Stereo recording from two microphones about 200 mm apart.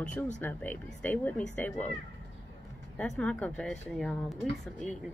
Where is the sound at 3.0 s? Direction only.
5° left (ahead or behind).